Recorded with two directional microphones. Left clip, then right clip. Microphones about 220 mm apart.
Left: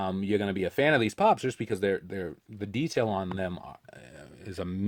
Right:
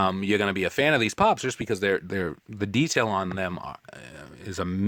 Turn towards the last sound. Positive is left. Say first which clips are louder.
# right 5 dB
turn(degrees=-20)  # may be behind; listen again after turning